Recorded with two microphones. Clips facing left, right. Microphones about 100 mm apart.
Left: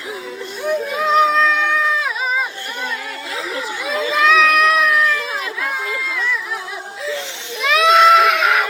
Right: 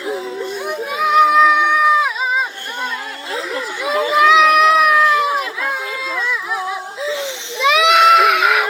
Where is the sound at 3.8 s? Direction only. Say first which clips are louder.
Right 4 dB; 20° right (ahead or behind).